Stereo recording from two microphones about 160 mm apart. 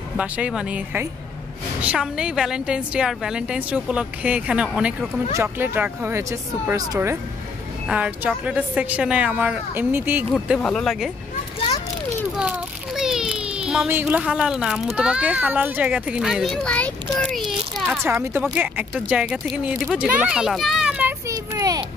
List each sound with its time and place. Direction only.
0.2 s a woman's voice: 5° right (ahead or behind)
10.3 s a woman's voice: centre (ahead or behind)
12.4 s a child's voice: 5° right (ahead or behind)
17.2 s a sound: centre (ahead or behind)
18.0 s a woman's voice: 15° right (ahead or behind)
21.3 s a sound: 20° right (ahead or behind)